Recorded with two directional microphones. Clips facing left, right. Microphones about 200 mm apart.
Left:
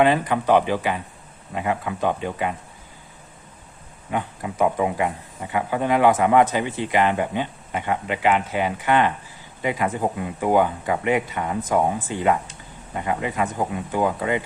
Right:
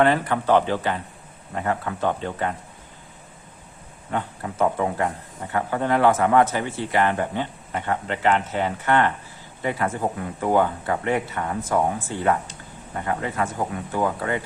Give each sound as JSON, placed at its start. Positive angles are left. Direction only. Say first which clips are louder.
{"t": 0.0, "sound": "speech", "louder": "left 1 dB", "side_deg": 15}
{"t": 4.1, "sound": "speech", "louder": "left 1 dB", "side_deg": 10}